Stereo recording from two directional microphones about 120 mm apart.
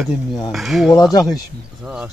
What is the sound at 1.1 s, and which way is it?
Speech, 30° left (ahead or behind).